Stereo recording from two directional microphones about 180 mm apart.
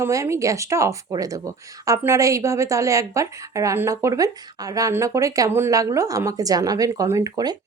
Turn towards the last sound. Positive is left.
turn(degrees=-20)  # may be behind; listen again after turning